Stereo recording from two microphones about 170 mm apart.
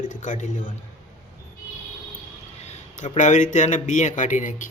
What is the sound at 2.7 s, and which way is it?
Speech, 45° left (ahead or behind).